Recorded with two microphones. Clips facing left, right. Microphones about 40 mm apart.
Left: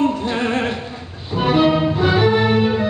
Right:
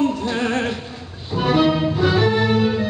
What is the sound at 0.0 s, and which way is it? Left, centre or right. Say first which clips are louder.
Music: left 1 dB; centre.